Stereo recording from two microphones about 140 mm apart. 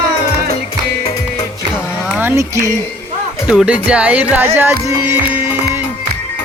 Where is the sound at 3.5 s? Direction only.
5° right (ahead or behind).